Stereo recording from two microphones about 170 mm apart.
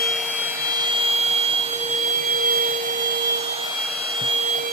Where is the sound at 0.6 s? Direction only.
25° right (ahead or behind); by 3.1 s 50° right (ahead or behind).